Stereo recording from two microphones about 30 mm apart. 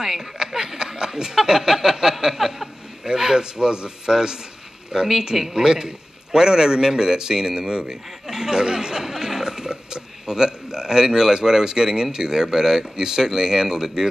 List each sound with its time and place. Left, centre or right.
0.0 s a man's voice: centre
2.2 s a sound: centre
3.0 s a man's voice: right